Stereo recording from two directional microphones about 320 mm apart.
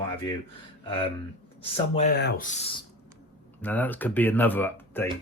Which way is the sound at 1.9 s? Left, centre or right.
Left.